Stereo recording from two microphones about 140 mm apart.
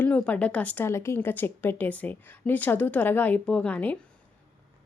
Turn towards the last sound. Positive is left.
turn(degrees=10)  # may be behind; listen again after turning